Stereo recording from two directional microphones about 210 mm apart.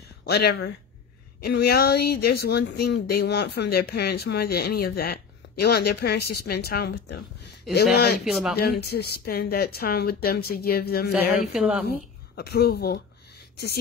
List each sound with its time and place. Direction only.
0.2 s speech: 50° left (ahead or behind)
8.2 s speech: centre (ahead or behind)
8.5 s speech: 50° left (ahead or behind)
11.5 s speech: 5° right (ahead or behind)
12.4 s speech: 50° left (ahead or behind)